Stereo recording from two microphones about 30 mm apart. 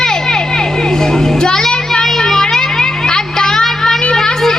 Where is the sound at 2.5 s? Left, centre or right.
Centre.